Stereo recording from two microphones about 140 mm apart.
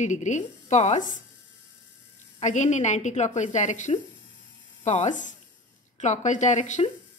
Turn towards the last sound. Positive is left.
turn(degrees=60)  # may be behind; listen again after turning